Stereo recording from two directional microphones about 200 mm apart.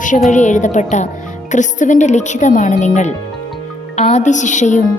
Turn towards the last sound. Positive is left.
turn(degrees=35)  # may be behind; listen again after turning